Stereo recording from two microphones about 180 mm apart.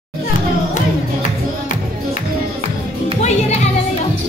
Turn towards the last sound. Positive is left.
turn(degrees=40)  # may be behind; listen again after turning